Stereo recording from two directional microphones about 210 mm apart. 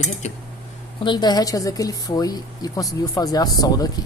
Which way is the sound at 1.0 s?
20° left (ahead or behind).